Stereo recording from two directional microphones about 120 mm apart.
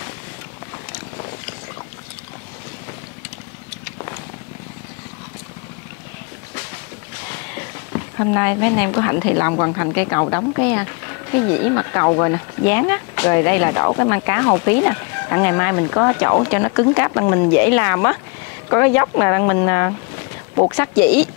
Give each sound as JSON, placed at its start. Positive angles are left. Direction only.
{"t": 7.5, "sound": "speech", "side_deg": 25}